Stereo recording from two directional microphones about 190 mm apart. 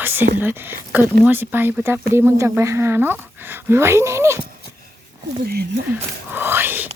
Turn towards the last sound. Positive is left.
turn(degrees=-10)  # may be behind; listen again after turning